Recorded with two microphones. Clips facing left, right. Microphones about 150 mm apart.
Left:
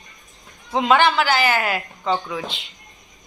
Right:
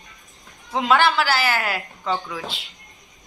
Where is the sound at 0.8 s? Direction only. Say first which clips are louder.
Left 2 dB; centre (ahead or behind).